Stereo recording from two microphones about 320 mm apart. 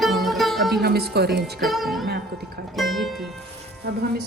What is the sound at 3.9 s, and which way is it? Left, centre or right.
Speech, right.